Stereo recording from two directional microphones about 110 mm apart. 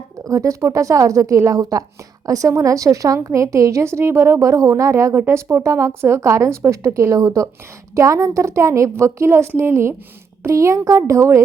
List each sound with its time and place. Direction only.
0.3 s a woman's voice: 30° right (ahead or behind)